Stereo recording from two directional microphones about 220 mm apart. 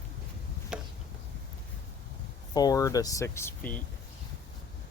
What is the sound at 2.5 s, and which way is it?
Speech, 15° left (ahead or behind).